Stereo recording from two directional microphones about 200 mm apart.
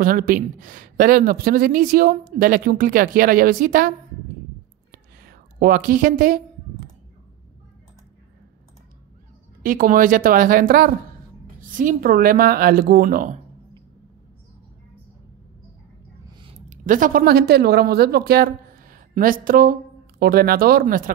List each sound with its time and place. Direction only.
0.0 s a woman's voice: 45° right (ahead or behind)
4.9 s a sound: 45° right (ahead or behind)
9.6 s a woman's voice: 45° right (ahead or behind)
16.3 s speech: 25° right (ahead or behind); by 21.1 s 45° right (ahead or behind)